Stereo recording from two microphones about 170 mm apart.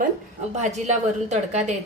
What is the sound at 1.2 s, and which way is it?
Speech, 45° right (ahead or behind).